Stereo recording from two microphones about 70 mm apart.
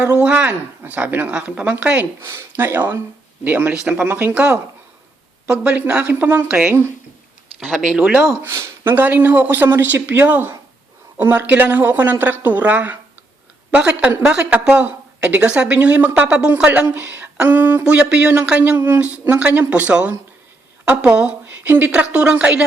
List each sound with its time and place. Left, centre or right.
0.1 s speech: centre
2.2 s speech: right; by 6.7 s centre
7.8 s a woman's voice: centre
8.4 s a woman's voice: right
17.8 s a woman's voice: centre
18.6 s a woman's voice: right